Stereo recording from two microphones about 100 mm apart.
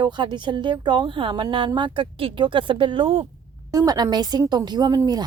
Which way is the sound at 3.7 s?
40° right (ahead or behind).